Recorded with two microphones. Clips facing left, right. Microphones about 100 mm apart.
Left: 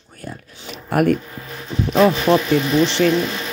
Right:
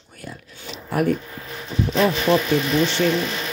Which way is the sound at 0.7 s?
60° left (ahead or behind).